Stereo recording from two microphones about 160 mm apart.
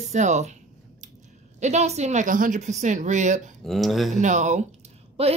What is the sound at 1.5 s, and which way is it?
A woman's voice, 45° right (ahead or behind).